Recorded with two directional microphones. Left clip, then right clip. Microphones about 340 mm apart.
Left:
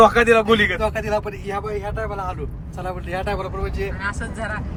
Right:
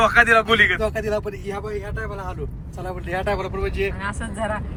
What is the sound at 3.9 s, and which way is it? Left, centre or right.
Speech, centre.